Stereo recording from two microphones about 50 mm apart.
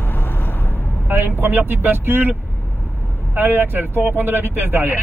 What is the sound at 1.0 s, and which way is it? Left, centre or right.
Vehicle, right.